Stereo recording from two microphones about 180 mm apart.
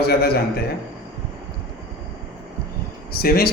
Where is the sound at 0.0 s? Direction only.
60° left (ahead or behind).